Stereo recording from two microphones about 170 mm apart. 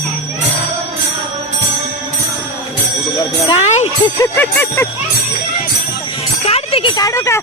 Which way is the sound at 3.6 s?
40° left (ahead or behind).